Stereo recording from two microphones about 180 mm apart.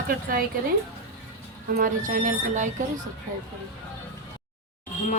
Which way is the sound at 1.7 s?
50° right (ahead or behind).